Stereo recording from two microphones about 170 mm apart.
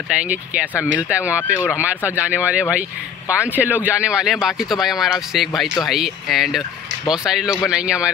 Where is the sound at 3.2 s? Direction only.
15° left (ahead or behind).